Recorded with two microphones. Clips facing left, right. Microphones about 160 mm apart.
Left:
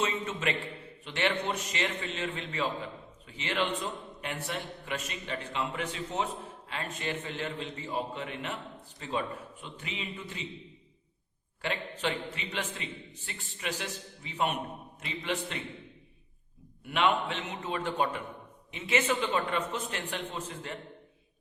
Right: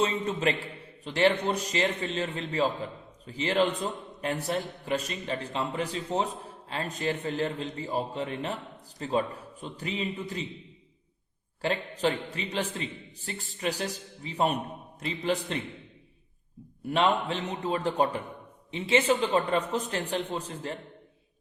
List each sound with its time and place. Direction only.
0.0 s a man's voice: 35° right (ahead or behind)
11.6 s a man's voice: 35° right (ahead or behind)
16.8 s a man's voice: 35° right (ahead or behind)